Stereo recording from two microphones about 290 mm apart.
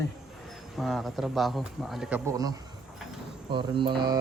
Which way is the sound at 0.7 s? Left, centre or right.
Centre.